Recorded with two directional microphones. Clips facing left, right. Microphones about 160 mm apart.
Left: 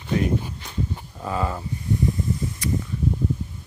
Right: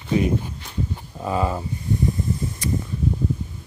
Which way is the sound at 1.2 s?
20° right (ahead or behind).